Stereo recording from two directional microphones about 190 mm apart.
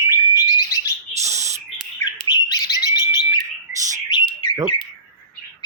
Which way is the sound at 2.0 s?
20° left (ahead or behind).